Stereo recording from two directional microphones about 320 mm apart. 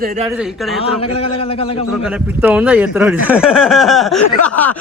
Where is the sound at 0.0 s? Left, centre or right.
Right.